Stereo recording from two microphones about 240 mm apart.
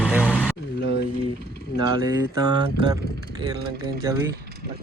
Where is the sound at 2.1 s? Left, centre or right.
Centre.